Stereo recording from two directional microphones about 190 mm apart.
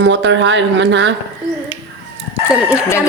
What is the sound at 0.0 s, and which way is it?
Speech, 75° right (ahead or behind).